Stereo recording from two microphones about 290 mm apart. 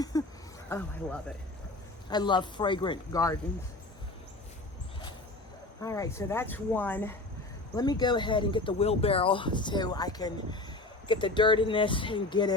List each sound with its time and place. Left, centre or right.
0.0 s speech: centre
5.8 s speech: centre